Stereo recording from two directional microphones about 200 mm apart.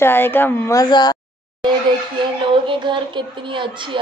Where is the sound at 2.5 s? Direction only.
25° right (ahead or behind).